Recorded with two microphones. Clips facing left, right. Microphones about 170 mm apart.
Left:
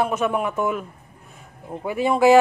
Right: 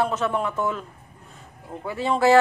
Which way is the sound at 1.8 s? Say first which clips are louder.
Left 3 dB; 15° left (ahead or behind).